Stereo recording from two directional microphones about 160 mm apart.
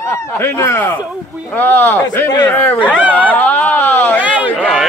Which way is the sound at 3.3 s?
10° left (ahead or behind).